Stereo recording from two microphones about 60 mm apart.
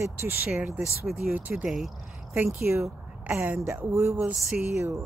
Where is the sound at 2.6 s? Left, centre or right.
Right.